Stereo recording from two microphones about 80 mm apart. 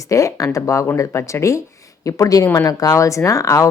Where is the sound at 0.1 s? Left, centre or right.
Left.